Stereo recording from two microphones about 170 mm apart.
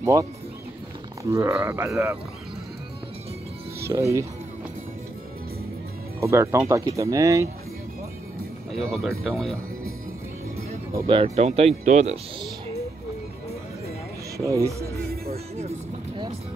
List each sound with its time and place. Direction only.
0.0 s speech: 20° right (ahead or behind)
3.9 s speech: 20° right (ahead or behind)
6.2 s speech: 15° right (ahead or behind)
8.7 s speech: centre (ahead or behind)
11.1 s speech: 35° right (ahead or behind)
14.3 s speech: 20° right (ahead or behind)
15.2 s speech: 40° right (ahead or behind)